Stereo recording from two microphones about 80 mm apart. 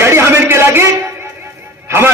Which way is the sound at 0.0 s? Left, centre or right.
Right.